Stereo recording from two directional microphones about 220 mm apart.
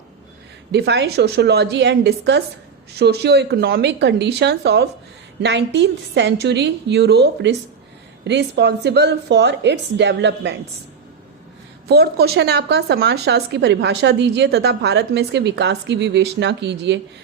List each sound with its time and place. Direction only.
0.7 s speech: 50° right (ahead or behind)
11.9 s speech: 45° right (ahead or behind)